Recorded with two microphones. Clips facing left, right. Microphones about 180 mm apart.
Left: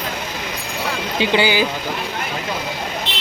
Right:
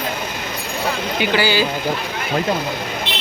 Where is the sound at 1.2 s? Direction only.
20° left (ahead or behind).